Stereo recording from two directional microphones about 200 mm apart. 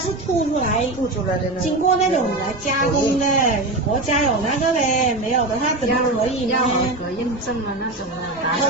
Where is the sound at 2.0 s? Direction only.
35° left (ahead or behind).